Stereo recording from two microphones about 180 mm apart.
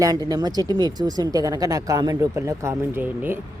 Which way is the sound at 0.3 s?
20° right (ahead or behind).